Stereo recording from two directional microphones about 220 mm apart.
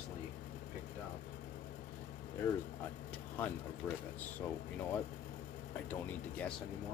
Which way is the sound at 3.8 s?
5° left (ahead or behind).